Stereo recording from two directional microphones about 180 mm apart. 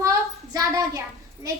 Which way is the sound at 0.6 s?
20° right (ahead or behind).